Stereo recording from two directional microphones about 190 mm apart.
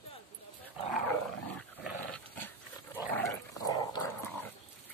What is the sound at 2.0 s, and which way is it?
Dog, 10° left (ahead or behind).